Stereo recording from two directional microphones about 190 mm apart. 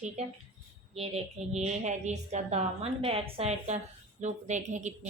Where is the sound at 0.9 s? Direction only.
35° right (ahead or behind).